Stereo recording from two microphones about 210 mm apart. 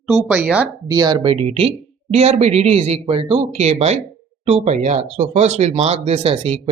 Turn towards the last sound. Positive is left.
turn(degrees=-25)  # may be behind; listen again after turning